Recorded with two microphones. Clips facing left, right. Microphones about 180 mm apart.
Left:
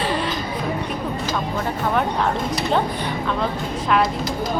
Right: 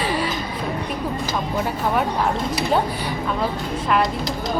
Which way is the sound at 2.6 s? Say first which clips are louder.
Even; 10° right (ahead or behind).